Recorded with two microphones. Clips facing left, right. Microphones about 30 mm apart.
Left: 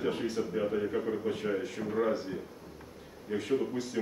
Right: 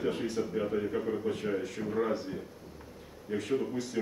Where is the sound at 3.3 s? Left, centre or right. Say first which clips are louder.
Left 1 dB; centre.